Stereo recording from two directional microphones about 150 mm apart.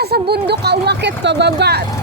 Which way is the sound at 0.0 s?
90° right.